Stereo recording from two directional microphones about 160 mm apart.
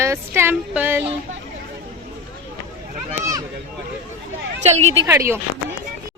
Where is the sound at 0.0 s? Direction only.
15° right (ahead or behind).